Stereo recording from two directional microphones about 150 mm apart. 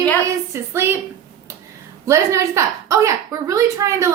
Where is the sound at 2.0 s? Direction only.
20° right (ahead or behind).